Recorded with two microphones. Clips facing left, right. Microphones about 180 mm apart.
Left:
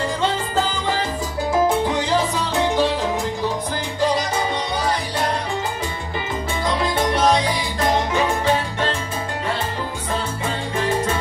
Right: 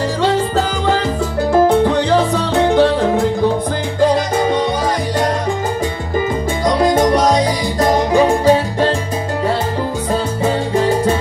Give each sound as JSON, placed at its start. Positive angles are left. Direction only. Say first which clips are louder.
{"t": 1.5, "sound": "salsa music", "louder": "right 7 dB", "side_deg": -60}
{"t": 6.6, "sound": "music", "louder": "right 9 dB", "side_deg": -40}